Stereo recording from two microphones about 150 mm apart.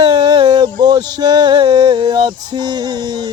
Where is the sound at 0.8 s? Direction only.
25° right (ahead or behind).